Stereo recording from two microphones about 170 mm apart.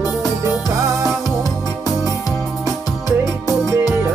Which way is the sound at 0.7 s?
20° right (ahead or behind).